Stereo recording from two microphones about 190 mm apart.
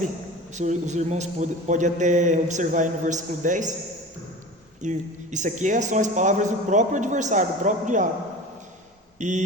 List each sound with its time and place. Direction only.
0.5 s speech: 40° right (ahead or behind)
4.8 s speech: 40° right (ahead or behind)
9.2 s speech: 40° right (ahead or behind)